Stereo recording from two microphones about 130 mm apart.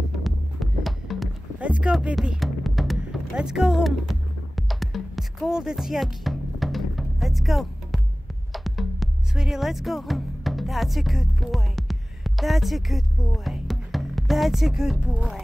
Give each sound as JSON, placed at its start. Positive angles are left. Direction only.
{"t": 0.2, "sound": "music", "side_deg": 0}